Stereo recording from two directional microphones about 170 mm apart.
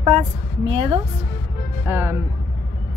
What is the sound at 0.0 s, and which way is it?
A woman's voice, 40° right (ahead or behind).